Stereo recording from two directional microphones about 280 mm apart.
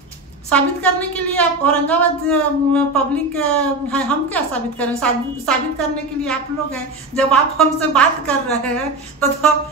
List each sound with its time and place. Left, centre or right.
0.5 s a woman's voice: centre